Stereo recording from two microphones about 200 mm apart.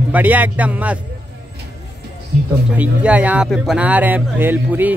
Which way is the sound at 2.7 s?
5° right (ahead or behind).